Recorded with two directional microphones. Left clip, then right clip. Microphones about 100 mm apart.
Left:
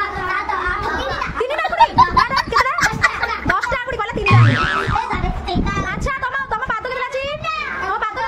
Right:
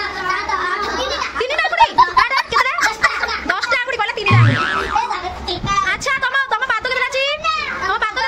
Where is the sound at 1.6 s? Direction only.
Centre (ahead or behind).